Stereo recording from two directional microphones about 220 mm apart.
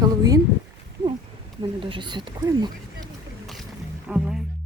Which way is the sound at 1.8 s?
20° right (ahead or behind).